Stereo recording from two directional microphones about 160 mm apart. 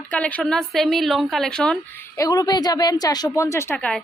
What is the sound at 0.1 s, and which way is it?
A woman's voice, 10° left (ahead or behind).